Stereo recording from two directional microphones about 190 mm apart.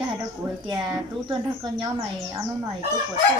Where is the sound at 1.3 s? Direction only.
25° right (ahead or behind).